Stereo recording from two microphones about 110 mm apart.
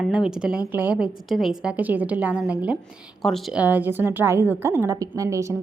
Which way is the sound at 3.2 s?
Centre (ahead or behind).